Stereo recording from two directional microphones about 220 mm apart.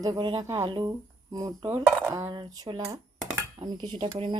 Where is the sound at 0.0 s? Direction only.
20° right (ahead or behind).